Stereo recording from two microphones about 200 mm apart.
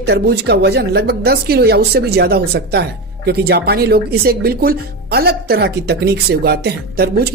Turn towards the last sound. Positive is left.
turn(degrees=-50)  # may be behind; listen again after turning